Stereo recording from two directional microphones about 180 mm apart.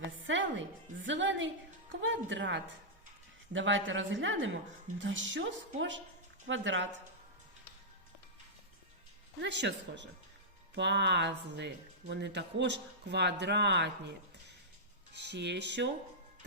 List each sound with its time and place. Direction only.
1.0 s a woman's voice: 90° right
9.4 s speech: 75° right (ahead or behind)